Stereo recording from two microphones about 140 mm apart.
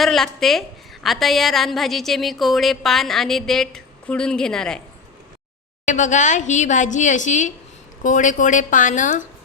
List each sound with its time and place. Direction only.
0.0 s a woman's voice: centre (ahead or behind)
5.8 s a woman's voice: 60° left (ahead or behind)